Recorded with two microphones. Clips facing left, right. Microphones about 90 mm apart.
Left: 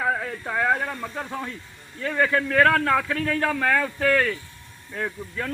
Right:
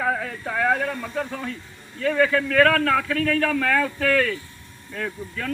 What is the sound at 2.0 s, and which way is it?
A man's voice, 20° left (ahead or behind).